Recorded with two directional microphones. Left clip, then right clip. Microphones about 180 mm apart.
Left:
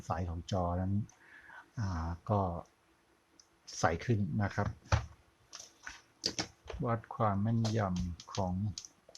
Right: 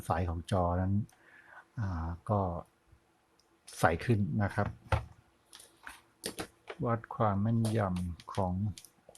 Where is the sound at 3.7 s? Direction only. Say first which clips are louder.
Right 3 dB; 15° right (ahead or behind).